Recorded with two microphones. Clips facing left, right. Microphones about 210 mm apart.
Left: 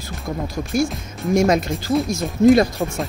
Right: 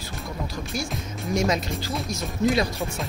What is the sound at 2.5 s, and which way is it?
Speech, 45° left (ahead or behind).